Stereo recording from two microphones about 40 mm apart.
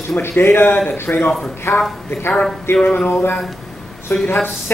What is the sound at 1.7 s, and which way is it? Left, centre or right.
Speech, left.